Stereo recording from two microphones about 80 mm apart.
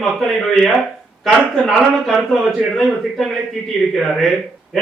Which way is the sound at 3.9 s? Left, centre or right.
Centre.